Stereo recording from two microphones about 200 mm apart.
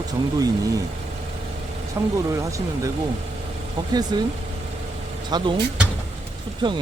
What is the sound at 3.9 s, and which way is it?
Speech, 20° right (ahead or behind).